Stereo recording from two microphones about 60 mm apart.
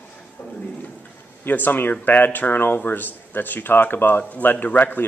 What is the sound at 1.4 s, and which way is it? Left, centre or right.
Speech, left.